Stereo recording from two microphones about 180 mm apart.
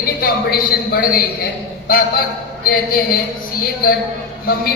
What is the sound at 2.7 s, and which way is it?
Speech, 55° left (ahead or behind).